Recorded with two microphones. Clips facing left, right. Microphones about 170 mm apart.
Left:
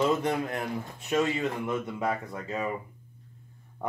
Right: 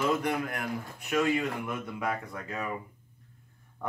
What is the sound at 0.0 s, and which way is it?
Speech, 25° left (ahead or behind).